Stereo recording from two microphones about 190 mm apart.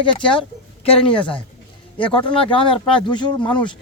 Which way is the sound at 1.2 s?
5° left (ahead or behind).